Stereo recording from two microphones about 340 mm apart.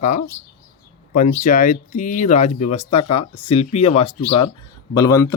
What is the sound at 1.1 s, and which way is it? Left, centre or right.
Speech, left.